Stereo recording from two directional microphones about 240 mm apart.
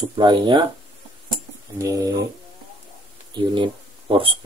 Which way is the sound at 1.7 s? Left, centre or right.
Centre.